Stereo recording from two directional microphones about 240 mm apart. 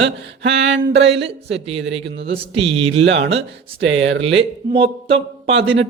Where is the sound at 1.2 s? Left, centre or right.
Right.